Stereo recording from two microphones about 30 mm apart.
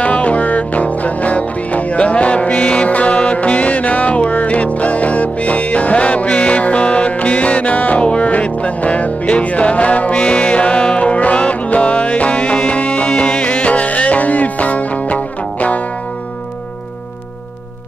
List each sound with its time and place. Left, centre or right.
0.0 s music: left
8.0 s music: left